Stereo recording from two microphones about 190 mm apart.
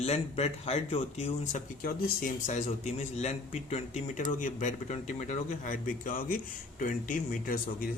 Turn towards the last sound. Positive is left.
turn(degrees=45)  # may be behind; listen again after turning